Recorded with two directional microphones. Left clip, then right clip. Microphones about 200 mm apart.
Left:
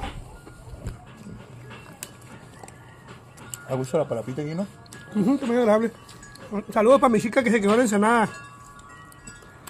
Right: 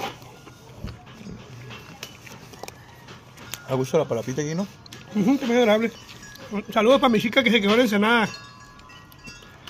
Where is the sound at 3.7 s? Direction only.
40° right (ahead or behind).